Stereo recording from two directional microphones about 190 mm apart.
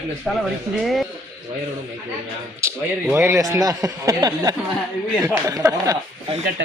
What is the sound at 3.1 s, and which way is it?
Speech, 15° right (ahead or behind).